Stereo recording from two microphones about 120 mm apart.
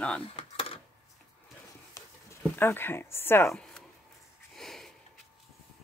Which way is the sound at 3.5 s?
5° left (ahead or behind).